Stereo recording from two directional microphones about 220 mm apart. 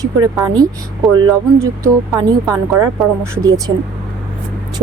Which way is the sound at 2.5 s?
10° right (ahead or behind).